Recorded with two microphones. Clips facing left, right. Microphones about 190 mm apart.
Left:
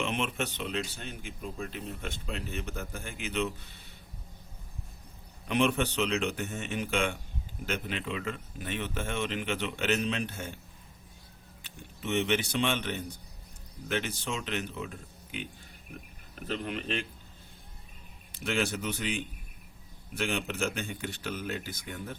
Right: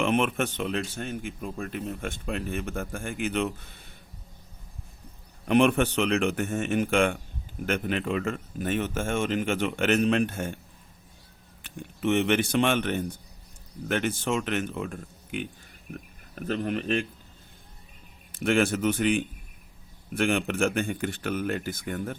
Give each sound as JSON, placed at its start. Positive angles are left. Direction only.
{"t": 0.0, "sound": "speech", "side_deg": -55}
{"t": 5.5, "sound": "speech", "side_deg": -50}
{"t": 11.6, "sound": "speech", "side_deg": -55}
{"t": 16.5, "sound": "speech", "side_deg": -45}
{"t": 18.3, "sound": "speech", "side_deg": -50}